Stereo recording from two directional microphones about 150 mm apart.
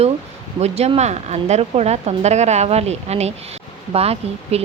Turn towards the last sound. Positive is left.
turn(degrees=-45)  # may be behind; listen again after turning